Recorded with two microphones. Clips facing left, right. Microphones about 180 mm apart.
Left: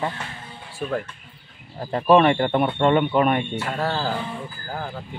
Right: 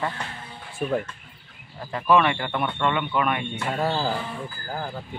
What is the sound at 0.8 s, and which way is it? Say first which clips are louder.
Speech: right 1 dB; 15° right (ahead or behind).